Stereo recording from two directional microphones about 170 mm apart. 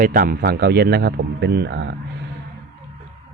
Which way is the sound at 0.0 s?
55° right (ahead or behind).